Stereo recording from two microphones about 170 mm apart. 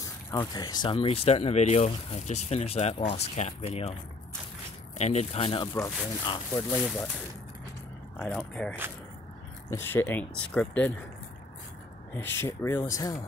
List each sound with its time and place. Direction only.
0.0 s speech: 20° left (ahead or behind); by 3.9 s 40° left (ahead or behind)
4.9 s speech: 40° left (ahead or behind)
8.2 s speech: 10° left (ahead or behind)
12.1 s speech: 15° left (ahead or behind)